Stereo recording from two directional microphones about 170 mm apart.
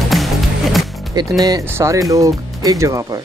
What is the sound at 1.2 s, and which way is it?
Speech, 25° right (ahead or behind).